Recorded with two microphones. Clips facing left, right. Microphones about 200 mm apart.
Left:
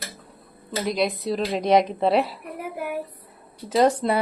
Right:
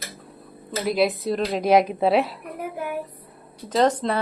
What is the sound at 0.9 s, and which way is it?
Speech, 5° right (ahead or behind).